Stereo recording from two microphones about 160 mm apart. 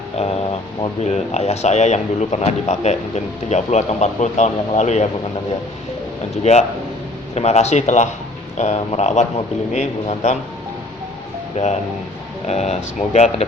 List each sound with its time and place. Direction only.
0.2 s speech: 45° left (ahead or behind)
6.4 s speech: 45° left (ahead or behind)
11.5 s speech: 45° left (ahead or behind)